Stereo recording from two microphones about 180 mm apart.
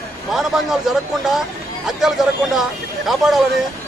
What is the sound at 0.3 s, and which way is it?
Speech, centre (ahead or behind).